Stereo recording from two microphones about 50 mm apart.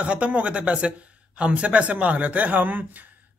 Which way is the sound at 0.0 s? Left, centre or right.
Right.